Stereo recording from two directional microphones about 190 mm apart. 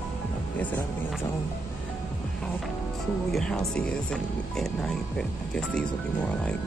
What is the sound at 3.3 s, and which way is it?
Speech, 5° left (ahead or behind).